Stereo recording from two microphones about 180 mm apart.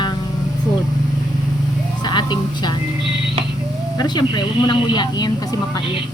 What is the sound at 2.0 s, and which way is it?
Music, 25° left (ahead or behind).